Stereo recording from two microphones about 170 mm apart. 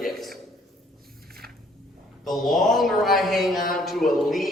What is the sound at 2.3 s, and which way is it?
A man's voice, centre (ahead or behind).